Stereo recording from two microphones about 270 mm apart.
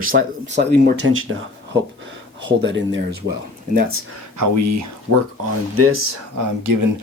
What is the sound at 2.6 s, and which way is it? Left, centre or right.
Speech, right.